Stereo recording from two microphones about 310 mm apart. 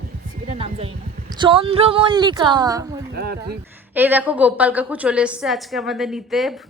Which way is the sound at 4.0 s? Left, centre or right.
Centre.